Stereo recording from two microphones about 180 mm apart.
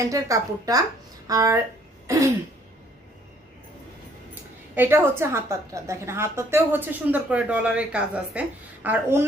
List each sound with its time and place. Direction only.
0.1 s a woman's voice: 20° right (ahead or behind)
2.0 s throat clearing: 15° right (ahead or behind)
4.7 s a woman's voice: 10° right (ahead or behind)